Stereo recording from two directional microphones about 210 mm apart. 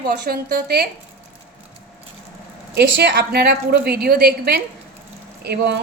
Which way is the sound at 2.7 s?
50° right (ahead or behind).